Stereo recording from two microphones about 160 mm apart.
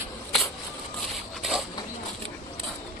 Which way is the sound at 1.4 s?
Centre (ahead or behind).